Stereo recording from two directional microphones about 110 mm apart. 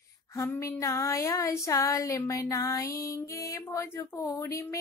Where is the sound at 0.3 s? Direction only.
25° left (ahead or behind).